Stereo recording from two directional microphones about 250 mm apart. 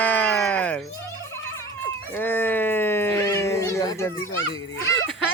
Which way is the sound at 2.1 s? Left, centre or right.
Centre.